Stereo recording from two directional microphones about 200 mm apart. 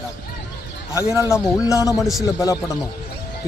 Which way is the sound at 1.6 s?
15° left (ahead or behind).